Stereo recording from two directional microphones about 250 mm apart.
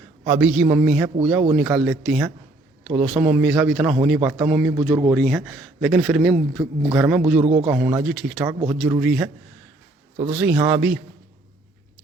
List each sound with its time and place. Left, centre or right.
0.3 s a man's voice: centre
7.4 s a man's voice: right
7.7 s a man's voice: centre
10.3 s speech: centre